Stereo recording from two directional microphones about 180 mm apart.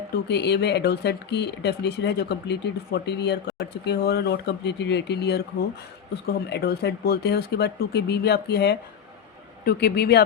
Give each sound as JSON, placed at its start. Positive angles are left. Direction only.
{"t": 0.3, "sound": "speech", "side_deg": 70}